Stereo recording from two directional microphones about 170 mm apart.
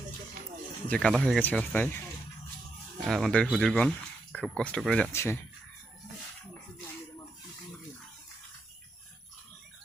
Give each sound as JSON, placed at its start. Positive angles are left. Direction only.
{"t": 0.9, "sound": "speech", "side_deg": 5}
{"t": 3.1, "sound": "speech", "side_deg": 0}
{"t": 5.1, "sound": "speech", "side_deg": 15}